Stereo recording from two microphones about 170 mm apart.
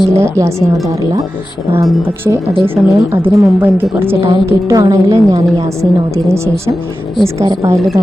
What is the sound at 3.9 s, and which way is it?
A woman's voice, 15° right (ahead or behind).